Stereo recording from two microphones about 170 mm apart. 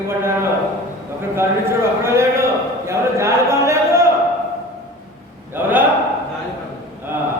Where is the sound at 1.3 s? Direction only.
15° right (ahead or behind).